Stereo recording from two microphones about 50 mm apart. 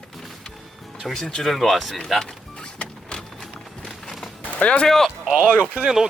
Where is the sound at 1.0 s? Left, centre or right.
Centre.